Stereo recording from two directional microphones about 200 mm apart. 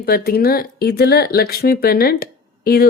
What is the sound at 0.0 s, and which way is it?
Speech, 50° left (ahead or behind).